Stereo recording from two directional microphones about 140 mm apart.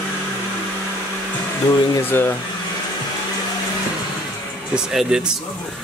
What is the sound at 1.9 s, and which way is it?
Speech, 15° left (ahead or behind).